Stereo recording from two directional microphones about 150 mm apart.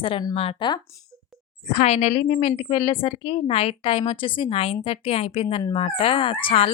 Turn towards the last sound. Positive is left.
turn(degrees=35)  # may be behind; listen again after turning